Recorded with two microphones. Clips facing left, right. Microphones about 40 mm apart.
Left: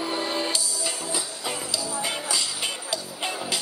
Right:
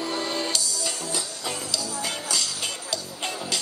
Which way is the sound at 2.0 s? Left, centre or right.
Centre.